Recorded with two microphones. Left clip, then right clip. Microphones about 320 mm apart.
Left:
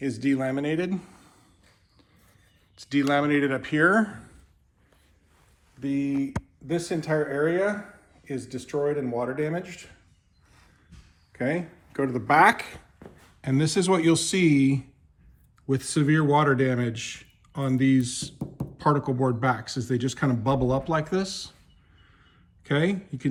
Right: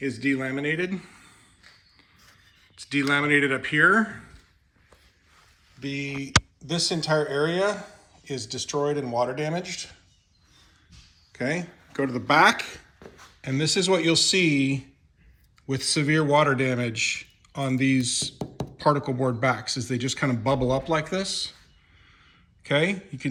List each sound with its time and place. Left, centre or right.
0.0 s a man's voice: centre
2.7 s a man's voice: centre
5.8 s a man's voice: centre
7.2 s speech: right
9.3 s speech: centre
11.3 s a man's voice: centre
22.6 s a man's voice: centre